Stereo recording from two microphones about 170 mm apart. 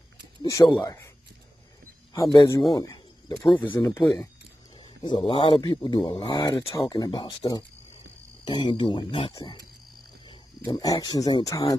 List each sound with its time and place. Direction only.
0.4 s speech: 25° left (ahead or behind)
2.1 s speech: 20° left (ahead or behind)
3.8 s speech: 15° left (ahead or behind)
4.7 s speech: 25° left (ahead or behind)
10.7 s speech: 20° left (ahead or behind)